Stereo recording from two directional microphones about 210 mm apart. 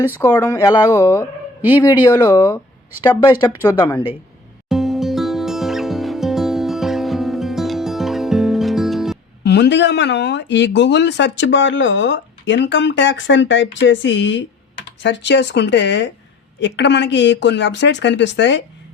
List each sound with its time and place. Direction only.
0.1 s speech: 15° left (ahead or behind)
4.7 s music: centre (ahead or behind)
9.4 s speech: 50° left (ahead or behind)